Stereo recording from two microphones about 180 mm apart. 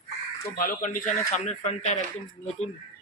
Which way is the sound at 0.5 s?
50° left (ahead or behind).